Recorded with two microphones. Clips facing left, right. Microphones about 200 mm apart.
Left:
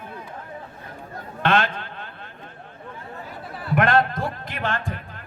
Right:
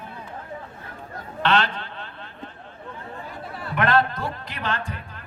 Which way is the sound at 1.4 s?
50° left (ahead or behind).